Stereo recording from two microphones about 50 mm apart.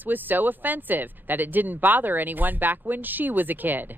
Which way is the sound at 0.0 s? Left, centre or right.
Right.